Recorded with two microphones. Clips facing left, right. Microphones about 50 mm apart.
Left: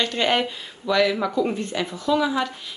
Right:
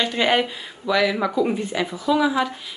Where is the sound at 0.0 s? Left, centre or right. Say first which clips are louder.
Right 2 dB; centre.